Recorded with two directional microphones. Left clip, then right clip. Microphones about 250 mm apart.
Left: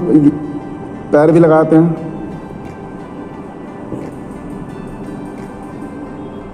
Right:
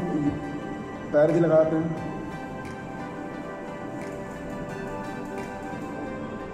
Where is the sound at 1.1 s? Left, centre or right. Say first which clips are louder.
Left 12 dB; left.